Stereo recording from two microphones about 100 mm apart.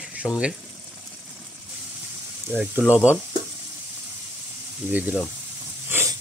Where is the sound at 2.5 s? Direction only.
15° right (ahead or behind).